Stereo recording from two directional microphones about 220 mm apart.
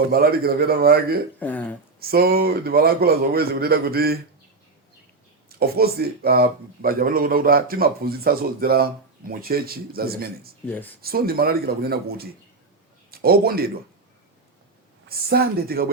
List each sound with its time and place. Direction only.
0.1 s speech: 45° right (ahead or behind)
1.4 s speech: 5° left (ahead or behind)
2.0 s speech: 45° right (ahead or behind)
5.5 s speech: 45° right (ahead or behind)
15.3 s speech: 45° right (ahead or behind)